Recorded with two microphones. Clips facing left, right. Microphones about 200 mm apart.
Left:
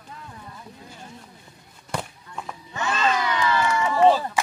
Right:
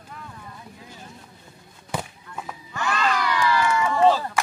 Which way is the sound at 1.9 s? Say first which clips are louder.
Even; 5° right (ahead or behind).